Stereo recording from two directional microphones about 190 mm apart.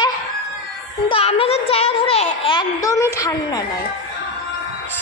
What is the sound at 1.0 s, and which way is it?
A child's voice, 30° left (ahead or behind).